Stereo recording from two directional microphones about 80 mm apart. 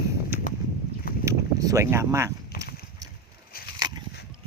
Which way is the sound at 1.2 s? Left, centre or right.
Right.